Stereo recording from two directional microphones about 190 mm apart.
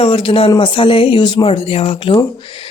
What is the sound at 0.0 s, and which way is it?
Speech, 30° left (ahead or behind).